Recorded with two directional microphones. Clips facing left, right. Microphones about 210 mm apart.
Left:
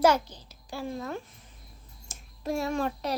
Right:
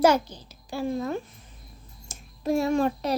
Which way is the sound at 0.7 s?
20° right (ahead or behind).